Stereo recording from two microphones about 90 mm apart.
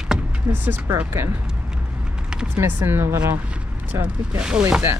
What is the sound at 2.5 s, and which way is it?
Speech, 25° right (ahead or behind).